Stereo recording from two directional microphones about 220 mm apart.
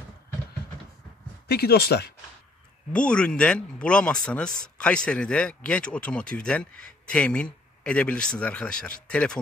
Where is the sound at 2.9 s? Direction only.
5° left (ahead or behind).